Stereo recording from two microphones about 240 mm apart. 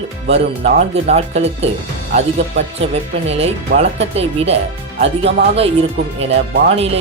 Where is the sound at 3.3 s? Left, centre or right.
Right.